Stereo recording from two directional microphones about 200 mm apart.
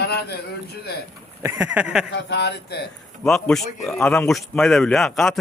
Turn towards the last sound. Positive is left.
turn(degrees=0)  # may be behind; listen again after turning